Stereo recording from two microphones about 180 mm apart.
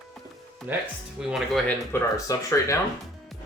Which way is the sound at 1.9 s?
15° left (ahead or behind).